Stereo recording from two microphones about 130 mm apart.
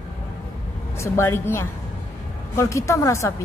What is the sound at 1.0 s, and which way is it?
A woman's voice, 20° left (ahead or behind).